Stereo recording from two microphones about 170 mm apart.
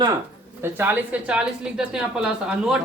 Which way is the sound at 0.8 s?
10° right (ahead or behind).